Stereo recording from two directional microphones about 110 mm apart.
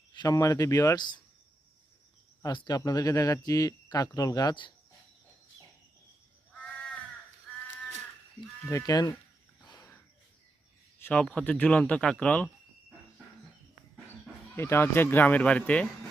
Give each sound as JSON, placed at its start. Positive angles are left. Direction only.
{"t": 0.1, "sound": "speech", "side_deg": 35}
{"t": 2.4, "sound": "speech", "side_deg": 40}
{"t": 6.5, "sound": "crow", "side_deg": 10}
{"t": 7.5, "sound": "livestock", "side_deg": 15}
{"t": 8.7, "sound": "speech", "side_deg": 35}
{"t": 9.6, "sound": "a sound", "side_deg": 35}
{"t": 11.0, "sound": "speech", "side_deg": 10}
{"t": 14.5, "sound": "speech", "side_deg": 20}